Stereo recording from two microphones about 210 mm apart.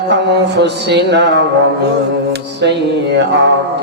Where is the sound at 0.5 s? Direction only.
55° right (ahead or behind).